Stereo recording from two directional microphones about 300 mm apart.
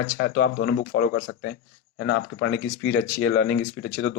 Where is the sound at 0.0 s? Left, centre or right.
Left.